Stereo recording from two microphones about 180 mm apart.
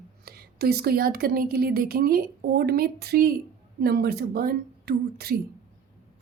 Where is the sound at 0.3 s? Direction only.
60° right (ahead or behind).